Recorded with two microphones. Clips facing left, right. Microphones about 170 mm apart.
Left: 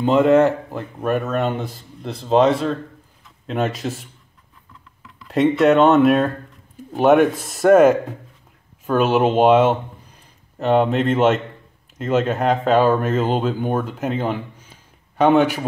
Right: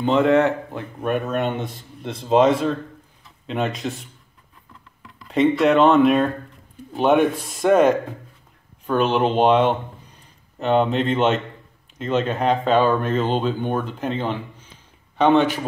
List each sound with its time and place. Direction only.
0.0 s speech: centre (ahead or behind)
5.0 s speech: centre (ahead or behind)
7.3 s speech: 45° left (ahead or behind)
7.7 s speech: 5° left (ahead or behind)